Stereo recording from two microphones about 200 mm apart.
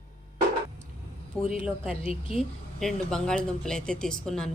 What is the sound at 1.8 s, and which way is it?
Speech, 30° left (ahead or behind).